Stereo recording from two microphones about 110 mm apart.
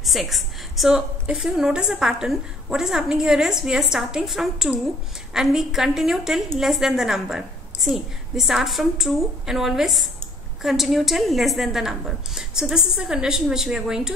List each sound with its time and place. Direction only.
0.0 s a woman's voice: centre (ahead or behind)